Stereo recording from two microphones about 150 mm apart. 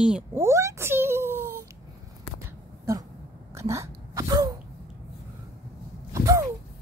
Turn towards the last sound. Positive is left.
turn(degrees=-20)  # may be behind; listen again after turning